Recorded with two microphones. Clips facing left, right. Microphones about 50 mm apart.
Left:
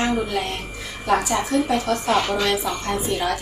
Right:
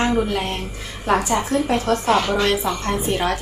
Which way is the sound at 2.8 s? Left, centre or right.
Right.